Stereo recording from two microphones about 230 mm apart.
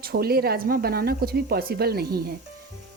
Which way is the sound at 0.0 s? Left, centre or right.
Right.